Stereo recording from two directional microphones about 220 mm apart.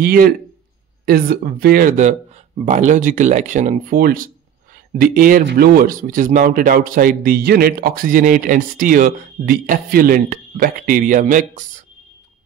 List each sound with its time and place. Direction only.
0.0 s a man's voice: 40° right (ahead or behind)